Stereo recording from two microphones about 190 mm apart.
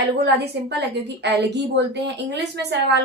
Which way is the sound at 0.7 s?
60° right (ahead or behind).